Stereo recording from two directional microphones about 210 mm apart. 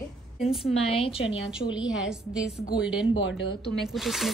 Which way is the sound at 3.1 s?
60° left (ahead or behind).